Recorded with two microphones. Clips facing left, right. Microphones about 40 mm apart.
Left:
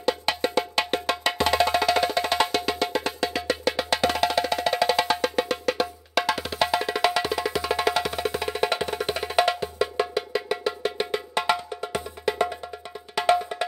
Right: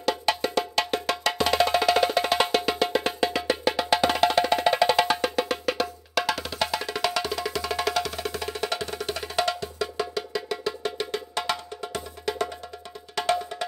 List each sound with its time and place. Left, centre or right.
0.6 s music: centre